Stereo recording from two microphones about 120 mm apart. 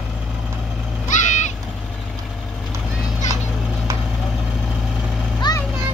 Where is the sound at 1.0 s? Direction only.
90° left.